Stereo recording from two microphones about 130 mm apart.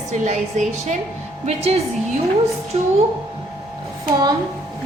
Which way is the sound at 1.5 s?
55° right (ahead or behind).